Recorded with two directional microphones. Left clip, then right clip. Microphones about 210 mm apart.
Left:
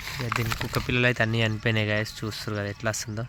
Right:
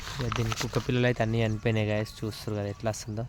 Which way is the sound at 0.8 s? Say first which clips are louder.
Left 4 dB; 10° right (ahead or behind).